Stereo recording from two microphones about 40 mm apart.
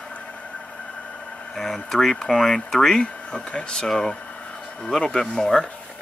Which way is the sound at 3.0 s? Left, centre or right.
Left.